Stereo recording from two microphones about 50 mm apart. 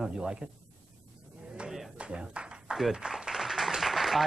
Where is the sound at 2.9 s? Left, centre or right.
Centre.